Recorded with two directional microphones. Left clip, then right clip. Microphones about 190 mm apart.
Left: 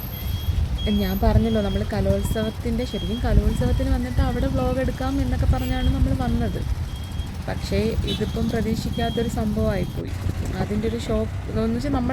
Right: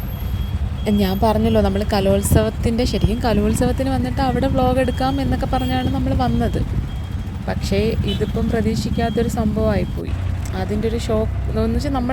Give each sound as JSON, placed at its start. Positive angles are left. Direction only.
{"t": 0.9, "sound": "a woman's voice", "side_deg": -45}
{"t": 10.9, "sound": "speech", "side_deg": -40}